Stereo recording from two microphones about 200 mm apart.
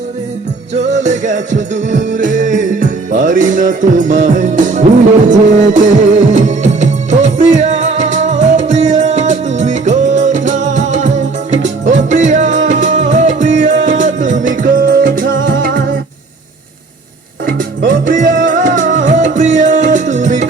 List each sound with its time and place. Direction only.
0.7 s music: 35° right (ahead or behind)
17.4 s music: 45° right (ahead or behind)